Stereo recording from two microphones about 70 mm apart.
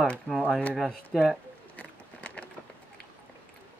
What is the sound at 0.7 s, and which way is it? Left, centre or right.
Speech, centre.